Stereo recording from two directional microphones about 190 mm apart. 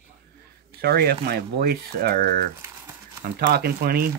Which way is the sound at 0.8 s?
55° right (ahead or behind).